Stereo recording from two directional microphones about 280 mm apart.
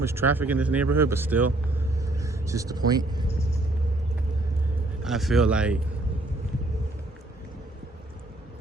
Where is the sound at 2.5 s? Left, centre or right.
Centre.